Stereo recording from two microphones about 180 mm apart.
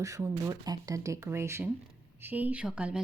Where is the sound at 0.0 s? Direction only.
15° right (ahead or behind).